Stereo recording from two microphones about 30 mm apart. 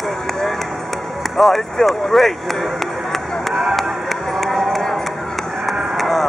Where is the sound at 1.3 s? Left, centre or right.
Centre.